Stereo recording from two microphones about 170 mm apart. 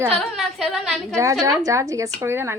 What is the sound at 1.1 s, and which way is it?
Speech, 20° right (ahead or behind).